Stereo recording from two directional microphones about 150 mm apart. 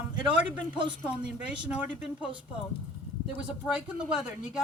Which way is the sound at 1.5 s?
10° right (ahead or behind).